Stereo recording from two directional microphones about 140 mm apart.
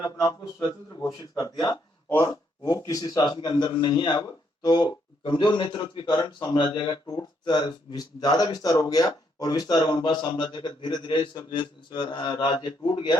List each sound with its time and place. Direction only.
0.0 s a man's voice: 30° left (ahead or behind)